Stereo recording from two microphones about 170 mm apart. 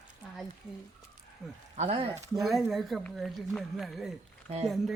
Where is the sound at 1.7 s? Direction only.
35° right (ahead or behind).